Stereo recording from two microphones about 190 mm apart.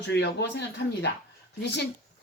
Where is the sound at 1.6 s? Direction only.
65° left (ahead or behind).